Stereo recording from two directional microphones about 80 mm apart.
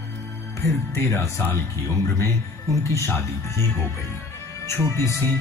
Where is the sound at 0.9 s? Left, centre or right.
Left.